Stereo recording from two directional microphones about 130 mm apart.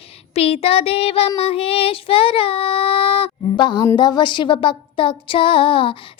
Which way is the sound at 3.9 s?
35° left (ahead or behind).